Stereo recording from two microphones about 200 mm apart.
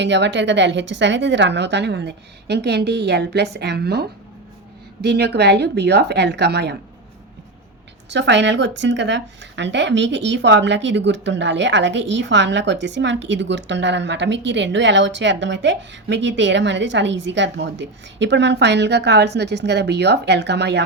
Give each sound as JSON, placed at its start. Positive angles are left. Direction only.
{"t": 0.0, "sound": "speech", "side_deg": -60}
{"t": 5.0, "sound": "speech", "side_deg": -55}
{"t": 8.1, "sound": "speech", "side_deg": -60}